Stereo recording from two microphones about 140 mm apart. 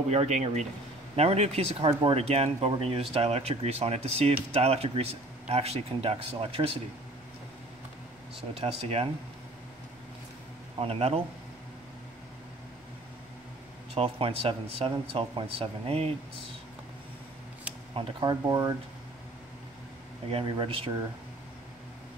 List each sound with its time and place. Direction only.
0.1 s speech: 55° right (ahead or behind)
8.5 s speech: 45° right (ahead or behind)
10.8 s speech: 45° right (ahead or behind)
13.9 s speech: 40° right (ahead or behind)
17.9 s speech: 35° right (ahead or behind)
20.2 s speech: 40° right (ahead or behind)